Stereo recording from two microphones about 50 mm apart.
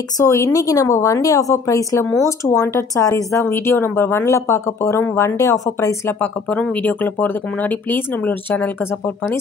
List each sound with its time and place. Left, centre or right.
0.2 s a woman's voice: left
3.4 s speech: left
6.5 s speech: left